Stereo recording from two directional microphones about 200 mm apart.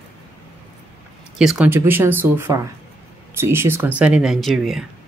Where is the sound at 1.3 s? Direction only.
5° right (ahead or behind).